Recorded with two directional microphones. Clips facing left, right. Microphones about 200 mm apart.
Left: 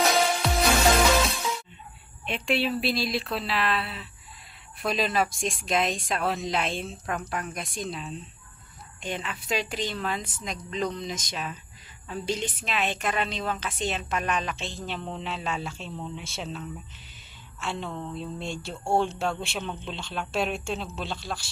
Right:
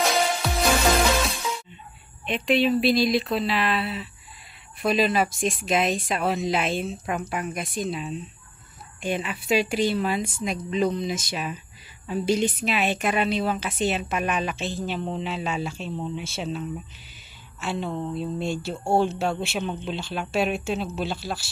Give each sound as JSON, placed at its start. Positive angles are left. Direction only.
{"t": 0.0, "sound": "music", "side_deg": 0}
{"t": 2.2, "sound": "a woman's voice", "side_deg": 0}
{"t": 17.6, "sound": "speech", "side_deg": -5}
{"t": 19.6, "sound": "a woman's voice", "side_deg": -15}
{"t": 19.9, "sound": "speech", "side_deg": -5}